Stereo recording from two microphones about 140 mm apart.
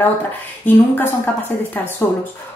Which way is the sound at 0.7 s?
15° left (ahead or behind).